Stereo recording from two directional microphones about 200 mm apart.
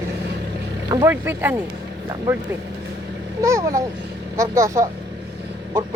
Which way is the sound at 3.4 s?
15° right (ahead or behind).